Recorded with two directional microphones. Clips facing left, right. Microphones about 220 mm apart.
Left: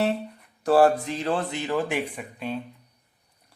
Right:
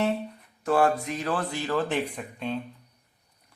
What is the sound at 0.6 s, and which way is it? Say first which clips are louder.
Speech: left 4 dB; 35° left (ahead or behind).